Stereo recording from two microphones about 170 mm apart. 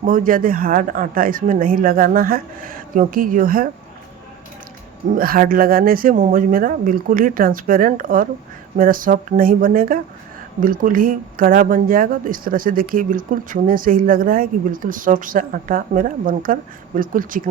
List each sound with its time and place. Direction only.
0.0 s speech: 55° right (ahead or behind)
5.1 s speech: 55° right (ahead or behind)